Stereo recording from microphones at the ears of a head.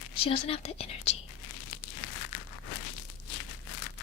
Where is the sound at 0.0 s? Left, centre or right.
Left.